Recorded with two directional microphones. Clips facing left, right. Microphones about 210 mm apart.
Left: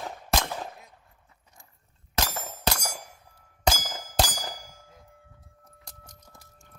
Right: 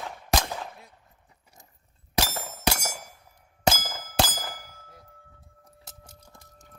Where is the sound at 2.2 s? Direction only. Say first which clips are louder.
Right 2 dB; 10° right (ahead or behind).